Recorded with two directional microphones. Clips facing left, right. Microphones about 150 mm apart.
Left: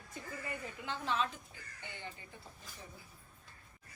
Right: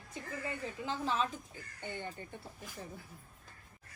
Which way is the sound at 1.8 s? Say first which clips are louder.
Right 7 dB; 50° right (ahead or behind).